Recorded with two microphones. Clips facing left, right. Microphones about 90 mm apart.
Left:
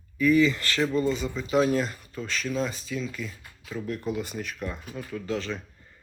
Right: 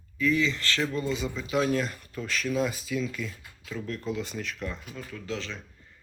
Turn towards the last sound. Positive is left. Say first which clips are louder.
# left 5 dB
turn(degrees=5)  # may be behind; listen again after turning